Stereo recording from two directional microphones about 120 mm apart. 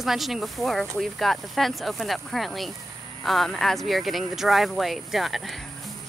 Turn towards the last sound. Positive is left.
turn(degrees=0)  # may be behind; listen again after turning